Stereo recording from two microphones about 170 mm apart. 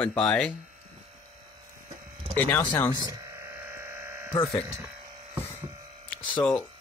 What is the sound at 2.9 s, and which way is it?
Speech, 20° right (ahead or behind).